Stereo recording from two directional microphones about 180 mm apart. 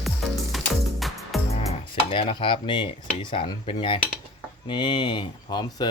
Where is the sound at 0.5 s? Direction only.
Centre (ahead or behind).